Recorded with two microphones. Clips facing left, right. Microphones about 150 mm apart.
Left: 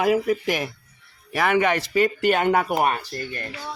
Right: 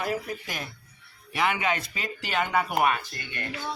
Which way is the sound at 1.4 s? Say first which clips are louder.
Left 6 dB; 60° left (ahead or behind).